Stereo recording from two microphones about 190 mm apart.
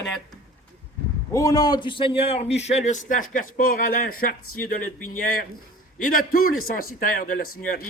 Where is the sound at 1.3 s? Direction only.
15° left (ahead or behind).